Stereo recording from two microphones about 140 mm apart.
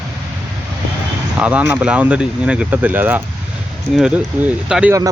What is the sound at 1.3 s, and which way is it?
Speech, 10° right (ahead or behind).